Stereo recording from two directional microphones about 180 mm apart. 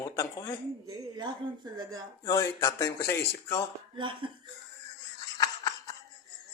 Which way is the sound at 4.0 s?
25° right (ahead or behind).